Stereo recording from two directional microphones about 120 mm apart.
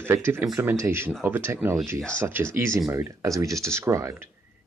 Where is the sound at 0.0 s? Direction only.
20° right (ahead or behind).